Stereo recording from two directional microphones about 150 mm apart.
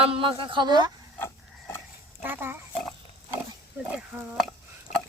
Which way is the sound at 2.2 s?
15° right (ahead or behind).